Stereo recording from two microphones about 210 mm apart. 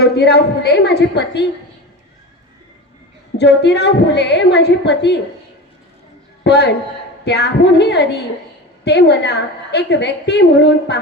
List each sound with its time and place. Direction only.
0.0 s a woman's voice: 50° left (ahead or behind)
3.3 s a woman's voice: 55° left (ahead or behind)
6.4 s a man's voice: 55° left (ahead or behind)